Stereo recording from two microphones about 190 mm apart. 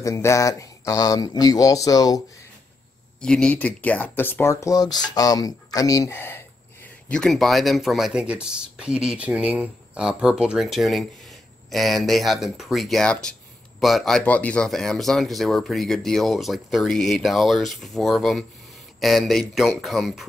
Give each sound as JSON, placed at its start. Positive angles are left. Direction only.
{"t": 0.0, "sound": "speech", "side_deg": 15}
{"t": 3.2, "sound": "speech", "side_deg": 5}